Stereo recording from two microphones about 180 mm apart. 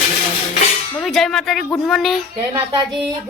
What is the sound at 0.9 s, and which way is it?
Speech, centre (ahead or behind).